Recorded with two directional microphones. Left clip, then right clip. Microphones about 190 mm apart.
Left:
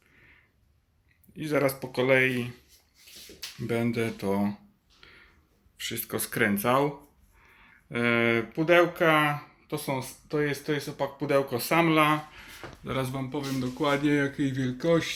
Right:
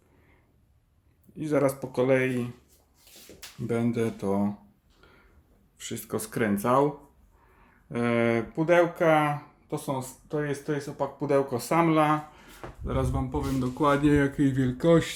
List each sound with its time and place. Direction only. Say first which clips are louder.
1.4 s speech: right 1 dB; 5° right (ahead or behind)
3.7 s speech: right 1 dB; 5° right (ahead or behind)
5.7 s speech: left 1 dB; 5° right (ahead or behind)